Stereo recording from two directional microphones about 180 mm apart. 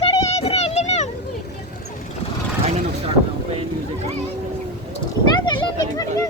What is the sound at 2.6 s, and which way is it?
Vehicle, 35° right (ahead or behind).